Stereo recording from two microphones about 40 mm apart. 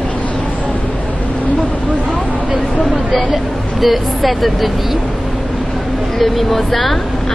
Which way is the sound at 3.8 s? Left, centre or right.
Centre.